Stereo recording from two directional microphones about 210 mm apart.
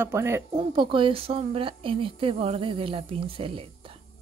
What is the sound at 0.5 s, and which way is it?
Speech, 25° right (ahead or behind).